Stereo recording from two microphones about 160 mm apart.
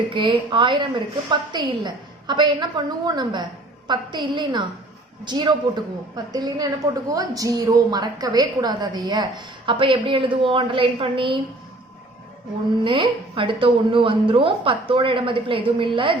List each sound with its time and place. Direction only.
0.1 s a woman's voice: 30° right (ahead or behind)
12.8 s speech: 30° right (ahead or behind)